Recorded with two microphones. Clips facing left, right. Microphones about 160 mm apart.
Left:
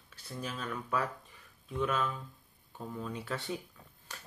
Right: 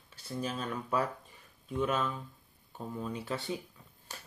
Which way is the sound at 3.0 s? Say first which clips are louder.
Right 2 dB; 20° right (ahead or behind).